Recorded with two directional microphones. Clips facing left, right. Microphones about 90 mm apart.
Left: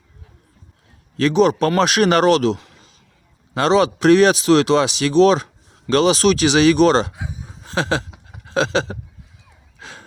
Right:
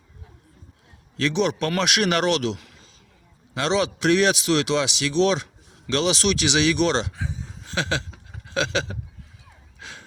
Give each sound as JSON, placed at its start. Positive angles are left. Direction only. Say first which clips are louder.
{"t": 1.1, "sound": "speech", "louder": "left 7 dB", "side_deg": 45}
{"t": 7.1, "sound": "speech", "louder": "even", "side_deg": 15}
{"t": 7.6, "sound": "a sound", "louder": "left 6 dB", "side_deg": 40}
{"t": 8.4, "sound": "speech", "louder": "left 6 dB", "side_deg": 35}
{"t": 9.8, "sound": "gasp", "louder": "left 3 dB", "side_deg": 40}